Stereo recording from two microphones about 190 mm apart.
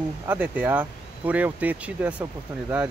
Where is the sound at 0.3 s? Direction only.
10° right (ahead or behind).